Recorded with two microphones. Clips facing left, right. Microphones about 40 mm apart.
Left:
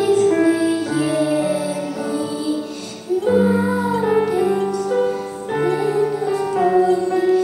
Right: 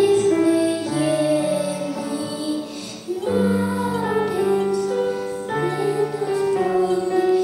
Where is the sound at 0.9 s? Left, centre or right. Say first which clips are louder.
Left 1 dB; centre.